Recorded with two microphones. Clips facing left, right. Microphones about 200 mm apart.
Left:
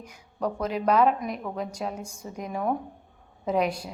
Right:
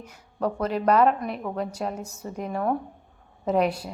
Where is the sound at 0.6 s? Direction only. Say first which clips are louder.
Right 2 dB; 5° left (ahead or behind).